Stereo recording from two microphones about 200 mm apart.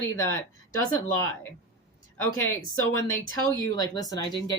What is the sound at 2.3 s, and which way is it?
Speech, 15° left (ahead or behind).